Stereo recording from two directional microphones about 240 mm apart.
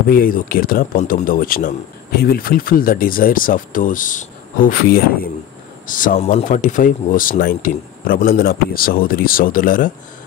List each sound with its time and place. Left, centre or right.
0.1 s speech: left